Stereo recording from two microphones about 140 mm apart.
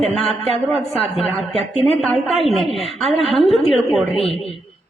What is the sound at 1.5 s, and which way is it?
Speech, 50° right (ahead or behind).